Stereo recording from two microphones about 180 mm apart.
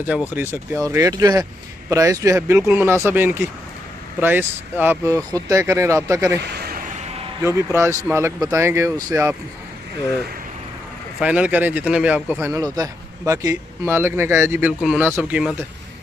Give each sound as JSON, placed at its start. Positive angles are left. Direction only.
{"t": 0.3, "sound": "speech", "side_deg": -10}
{"t": 6.4, "sound": "a sound", "side_deg": -60}
{"t": 7.4, "sound": "speech", "side_deg": -15}
{"t": 11.1, "sound": "speech", "side_deg": -5}